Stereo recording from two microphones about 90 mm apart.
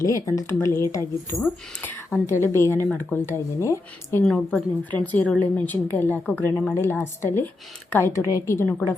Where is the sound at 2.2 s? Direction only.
30° left (ahead or behind).